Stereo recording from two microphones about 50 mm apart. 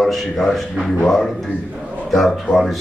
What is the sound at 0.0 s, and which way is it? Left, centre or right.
A man's voice, centre.